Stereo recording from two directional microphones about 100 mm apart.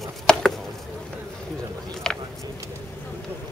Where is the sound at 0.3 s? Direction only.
10° left (ahead or behind).